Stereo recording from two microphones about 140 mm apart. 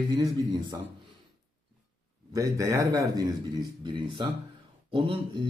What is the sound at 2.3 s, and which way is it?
Speech, 25° right (ahead or behind).